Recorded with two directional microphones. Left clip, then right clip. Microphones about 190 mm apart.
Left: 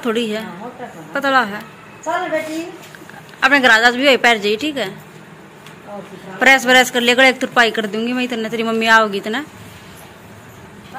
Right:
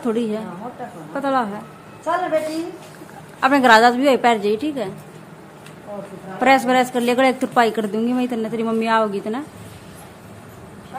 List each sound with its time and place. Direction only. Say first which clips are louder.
0.0 s speech: left 3 dB; 10° right (ahead or behind)
3.3 s a woman's voice: left 1 dB; 30° right (ahead or behind)
6.4 s speech: left 4 dB; 10° right (ahead or behind)